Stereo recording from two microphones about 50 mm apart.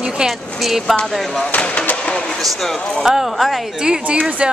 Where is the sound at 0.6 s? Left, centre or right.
Centre.